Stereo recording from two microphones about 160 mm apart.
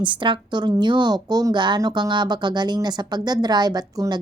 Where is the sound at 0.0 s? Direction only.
30° right (ahead or behind).